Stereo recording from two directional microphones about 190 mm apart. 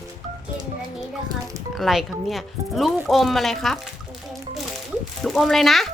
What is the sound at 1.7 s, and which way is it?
Speech, centre (ahead or behind).